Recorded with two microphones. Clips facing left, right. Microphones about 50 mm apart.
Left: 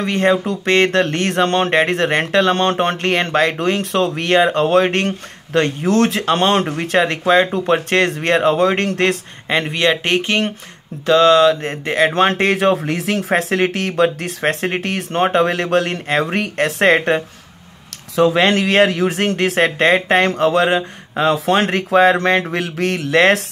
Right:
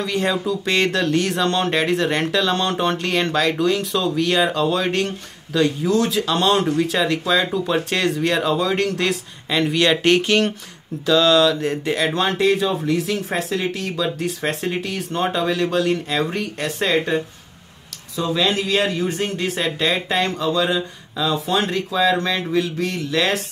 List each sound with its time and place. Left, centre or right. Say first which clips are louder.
0.0 s speech: left 5 dB; left
9.8 s speech: right 2 dB; left
11.1 s speech: left 4 dB; left
12.1 s speech: left 3 dB; left
18.1 s speech: left 7 dB; left